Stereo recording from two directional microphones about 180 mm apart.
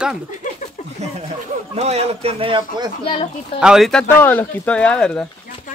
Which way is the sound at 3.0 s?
30° left (ahead or behind).